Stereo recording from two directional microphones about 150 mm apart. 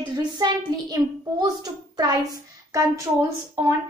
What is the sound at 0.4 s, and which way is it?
A woman's voice, 25° right (ahead or behind).